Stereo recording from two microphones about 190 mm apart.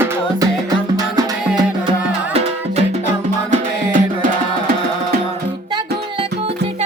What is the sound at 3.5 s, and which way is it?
Music, 45° right (ahead or behind).